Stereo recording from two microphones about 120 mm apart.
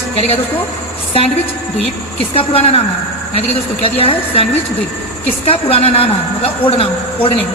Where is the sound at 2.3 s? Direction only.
60° left (ahead or behind).